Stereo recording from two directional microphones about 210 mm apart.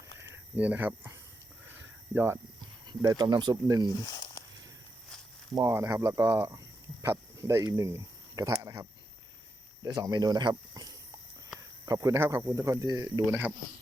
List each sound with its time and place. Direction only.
0.2 s a sound: 10° right (ahead or behind)
2.1 s speech: 10° right (ahead or behind)
5.5 s speech: 15° right (ahead or behind)